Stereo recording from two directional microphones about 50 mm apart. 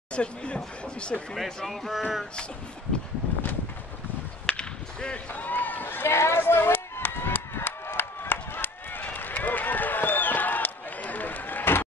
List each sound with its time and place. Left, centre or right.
0.1 s speech: left
1.3 s speech: centre
4.5 s whip: centre
5.3 s speech: left
6.0 s run: left